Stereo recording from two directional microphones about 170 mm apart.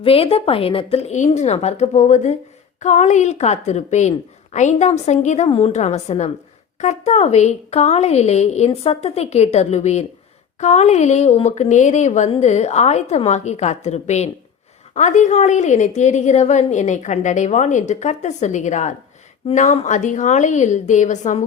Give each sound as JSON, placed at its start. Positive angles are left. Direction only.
{"t": 0.0, "sound": "a woman's voice", "side_deg": 35}